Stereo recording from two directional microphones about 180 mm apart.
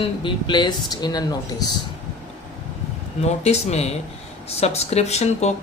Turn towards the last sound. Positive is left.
turn(degrees=40)  # may be behind; listen again after turning